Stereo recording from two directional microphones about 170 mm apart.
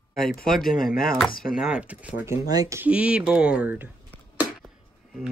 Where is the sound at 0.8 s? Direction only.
60° left (ahead or behind).